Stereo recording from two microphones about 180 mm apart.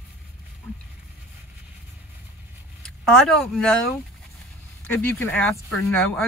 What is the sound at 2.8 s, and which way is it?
Speech, 5° left (ahead or behind).